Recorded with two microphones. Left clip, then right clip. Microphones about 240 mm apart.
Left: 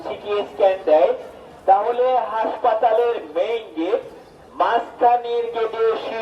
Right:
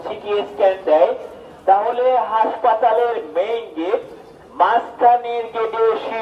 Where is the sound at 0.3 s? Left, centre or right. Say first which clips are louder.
Right 1 dB; right.